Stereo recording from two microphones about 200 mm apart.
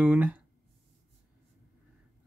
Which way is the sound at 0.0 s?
5° right (ahead or behind).